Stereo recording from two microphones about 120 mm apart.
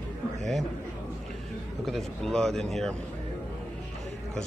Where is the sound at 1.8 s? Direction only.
5° left (ahead or behind).